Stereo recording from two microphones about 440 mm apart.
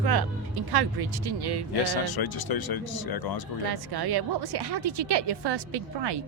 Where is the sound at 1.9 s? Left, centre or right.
Left.